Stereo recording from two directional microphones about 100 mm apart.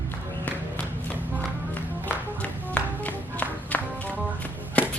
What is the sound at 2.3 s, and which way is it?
Music, 15° left (ahead or behind).